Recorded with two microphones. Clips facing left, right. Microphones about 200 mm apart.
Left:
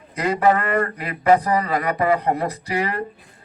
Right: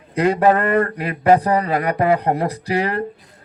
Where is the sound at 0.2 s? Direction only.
50° right (ahead or behind).